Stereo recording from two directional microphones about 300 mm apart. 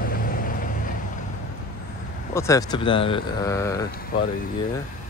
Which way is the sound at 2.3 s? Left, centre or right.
Centre.